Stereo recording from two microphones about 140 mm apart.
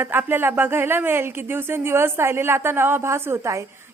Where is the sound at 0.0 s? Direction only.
15° right (ahead or behind).